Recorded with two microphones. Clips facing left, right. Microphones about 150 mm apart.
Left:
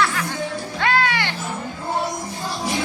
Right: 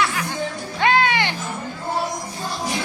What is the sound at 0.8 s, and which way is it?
Music, 20° right (ahead or behind).